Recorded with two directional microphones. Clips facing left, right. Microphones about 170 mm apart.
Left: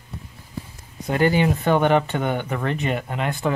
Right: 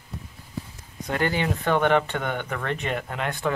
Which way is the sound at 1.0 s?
10° left (ahead or behind).